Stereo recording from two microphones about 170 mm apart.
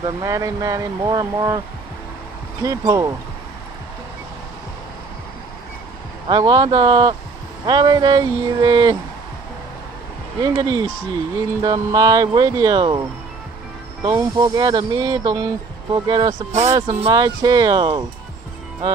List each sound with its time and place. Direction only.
0.2 s speech: 20° right (ahead or behind)
2.6 s speech: 20° right (ahead or behind)
6.2 s speech: 25° right (ahead or behind)
10.4 s speech: 25° right (ahead or behind)
14.0 s speech: 25° right (ahead or behind)